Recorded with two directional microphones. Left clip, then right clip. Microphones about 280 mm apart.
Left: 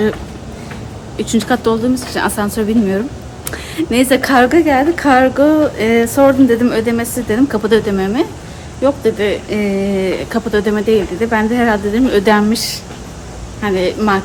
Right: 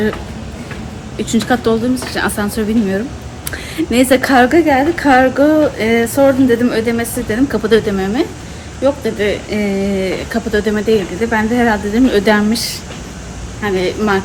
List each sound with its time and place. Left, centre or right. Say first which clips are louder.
1.2 s speech: even; centre